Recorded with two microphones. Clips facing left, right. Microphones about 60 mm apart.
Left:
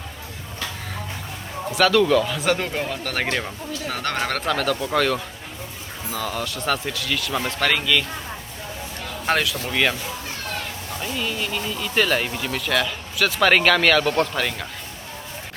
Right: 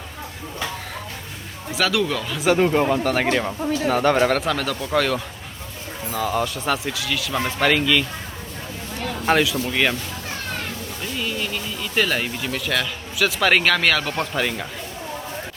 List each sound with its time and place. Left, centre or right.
1.7 s speech: centre
9.2 s speech: centre
11.2 s speech: centre